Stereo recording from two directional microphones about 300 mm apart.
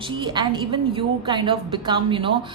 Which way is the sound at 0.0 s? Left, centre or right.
Centre.